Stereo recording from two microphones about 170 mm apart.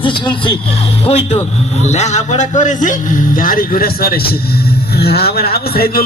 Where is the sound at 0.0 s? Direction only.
30° left (ahead or behind).